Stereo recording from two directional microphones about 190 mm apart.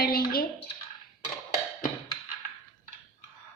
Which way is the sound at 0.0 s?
50° left (ahead or behind).